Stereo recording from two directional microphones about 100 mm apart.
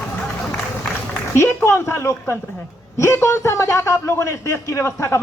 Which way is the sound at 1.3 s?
25° left (ahead or behind).